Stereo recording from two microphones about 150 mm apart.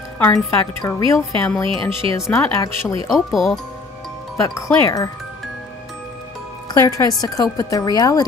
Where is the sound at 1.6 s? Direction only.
35° right (ahead or behind).